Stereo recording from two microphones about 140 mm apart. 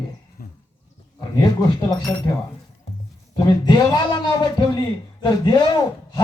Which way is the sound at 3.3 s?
30° left (ahead or behind).